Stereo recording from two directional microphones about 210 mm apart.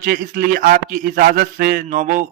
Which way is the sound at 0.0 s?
45° right (ahead or behind).